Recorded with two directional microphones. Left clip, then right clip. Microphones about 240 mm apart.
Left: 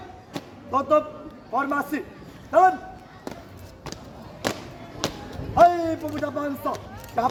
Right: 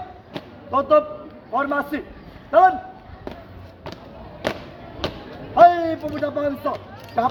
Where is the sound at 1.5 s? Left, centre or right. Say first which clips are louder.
Right 3 dB; right.